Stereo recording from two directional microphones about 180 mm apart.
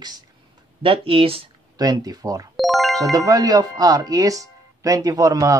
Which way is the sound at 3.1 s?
20° right (ahead or behind).